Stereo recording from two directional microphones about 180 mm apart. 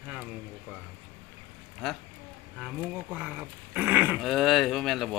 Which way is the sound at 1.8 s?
Centre (ahead or behind).